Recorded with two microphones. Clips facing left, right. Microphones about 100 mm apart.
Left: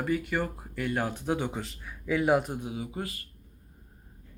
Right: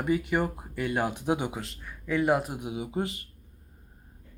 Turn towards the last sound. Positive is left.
turn(degrees=-25)  # may be behind; listen again after turning